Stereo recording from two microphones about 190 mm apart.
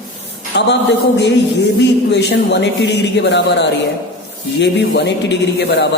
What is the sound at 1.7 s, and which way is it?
A man's voice, 65° left (ahead or behind).